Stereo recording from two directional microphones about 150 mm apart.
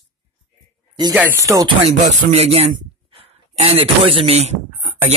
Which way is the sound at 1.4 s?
20° right (ahead or behind).